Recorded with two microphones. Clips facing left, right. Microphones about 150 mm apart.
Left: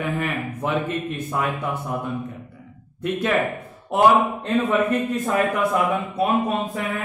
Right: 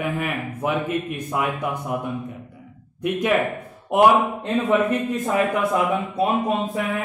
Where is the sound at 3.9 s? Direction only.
15° right (ahead or behind).